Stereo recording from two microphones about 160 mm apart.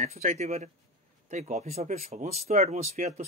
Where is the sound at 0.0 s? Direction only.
45° right (ahead or behind).